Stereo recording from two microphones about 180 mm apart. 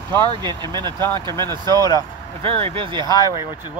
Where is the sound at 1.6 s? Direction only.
20° left (ahead or behind).